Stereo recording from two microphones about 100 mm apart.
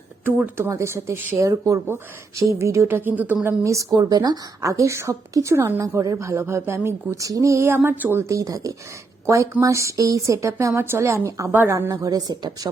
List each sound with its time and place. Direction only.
0.3 s speech: 20° right (ahead or behind)
3.4 s a woman's voice: 30° right (ahead or behind)